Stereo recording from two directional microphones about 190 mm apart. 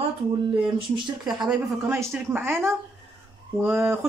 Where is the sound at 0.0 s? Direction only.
25° right (ahead or behind).